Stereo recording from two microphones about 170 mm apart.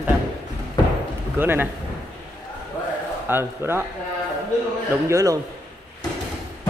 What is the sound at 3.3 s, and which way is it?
Speech, 15° right (ahead or behind).